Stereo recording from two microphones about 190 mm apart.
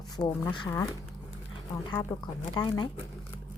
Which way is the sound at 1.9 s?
20° left (ahead or behind).